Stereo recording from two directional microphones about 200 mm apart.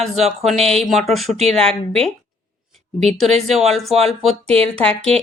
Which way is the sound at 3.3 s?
30° right (ahead or behind).